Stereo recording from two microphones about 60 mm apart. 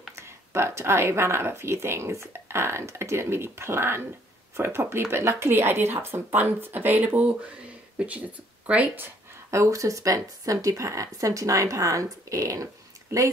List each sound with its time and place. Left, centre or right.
0.1 s speech: right
8.6 s speech: right
9.5 s speech: right